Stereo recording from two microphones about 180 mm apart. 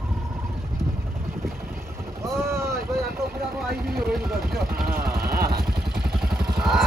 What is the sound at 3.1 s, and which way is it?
Vehicle, 10° right (ahead or behind).